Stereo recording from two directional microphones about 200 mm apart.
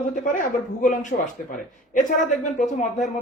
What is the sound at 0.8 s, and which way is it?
Speech, 40° left (ahead or behind).